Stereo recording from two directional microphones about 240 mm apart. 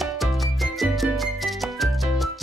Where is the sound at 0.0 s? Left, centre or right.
Centre.